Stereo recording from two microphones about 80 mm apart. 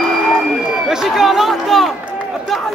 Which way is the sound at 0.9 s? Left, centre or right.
Centre.